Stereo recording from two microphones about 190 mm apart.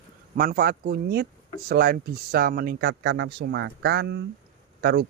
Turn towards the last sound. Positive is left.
turn(degrees=-55)  # may be behind; listen again after turning